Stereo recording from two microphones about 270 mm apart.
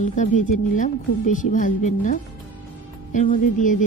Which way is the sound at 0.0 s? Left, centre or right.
Left.